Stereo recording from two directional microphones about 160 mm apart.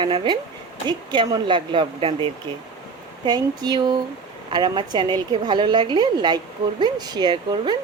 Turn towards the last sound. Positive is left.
turn(degrees=-25)  # may be behind; listen again after turning